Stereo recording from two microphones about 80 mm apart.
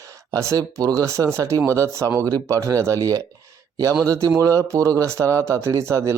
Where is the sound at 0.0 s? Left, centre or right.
Right.